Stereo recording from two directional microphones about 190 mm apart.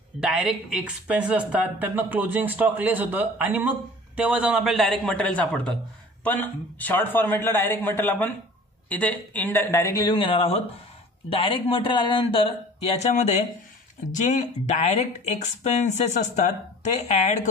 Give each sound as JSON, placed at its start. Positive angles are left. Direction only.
{"t": 0.2, "sound": "a man's voice", "side_deg": -5}
{"t": 13.0, "sound": "speech", "side_deg": 40}